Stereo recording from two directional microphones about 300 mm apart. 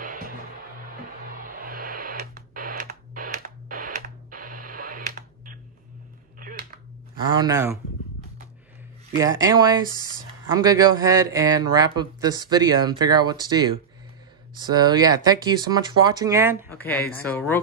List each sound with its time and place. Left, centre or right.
0.0 s music: right
1.2 s radio: right
7.2 s a man's voice: centre
9.2 s a man's voice: centre
16.6 s speech: centre